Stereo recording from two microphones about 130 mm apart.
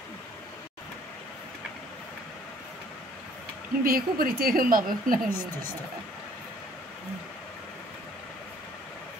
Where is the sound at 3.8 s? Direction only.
90° right.